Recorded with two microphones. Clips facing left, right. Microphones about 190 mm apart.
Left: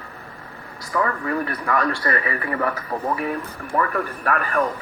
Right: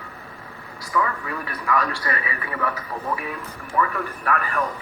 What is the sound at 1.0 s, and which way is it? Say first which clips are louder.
A man's voice: left 5 dB; 45° left (ahead or behind).